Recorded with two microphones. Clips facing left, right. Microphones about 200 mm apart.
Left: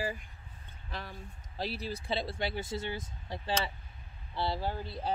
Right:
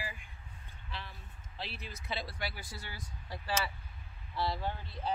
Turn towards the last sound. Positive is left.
turn(degrees=35)  # may be behind; listen again after turning